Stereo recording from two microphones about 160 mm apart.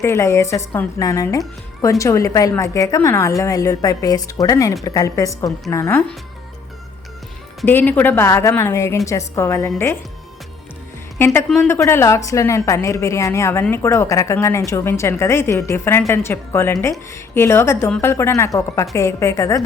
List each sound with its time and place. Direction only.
0.0 s a woman's voice: 15° left (ahead or behind)
7.6 s a woman's voice: 10° left (ahead or behind)
11.4 s speech: 5° left (ahead or behind)
11.8 s a woman's voice: 20° left (ahead or behind)